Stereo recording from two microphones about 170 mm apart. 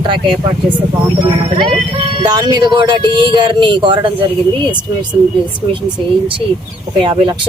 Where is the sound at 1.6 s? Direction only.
30° right (ahead or behind).